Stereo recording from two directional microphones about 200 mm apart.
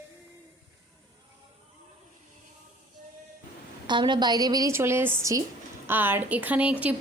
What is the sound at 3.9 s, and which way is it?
A woman's voice, 25° right (ahead or behind).